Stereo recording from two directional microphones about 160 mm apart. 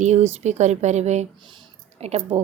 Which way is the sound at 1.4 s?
35° right (ahead or behind).